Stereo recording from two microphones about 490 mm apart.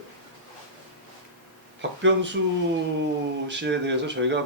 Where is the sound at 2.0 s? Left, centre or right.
Right.